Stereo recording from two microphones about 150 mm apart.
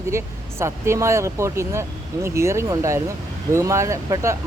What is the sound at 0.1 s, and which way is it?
Speech, 20° right (ahead or behind).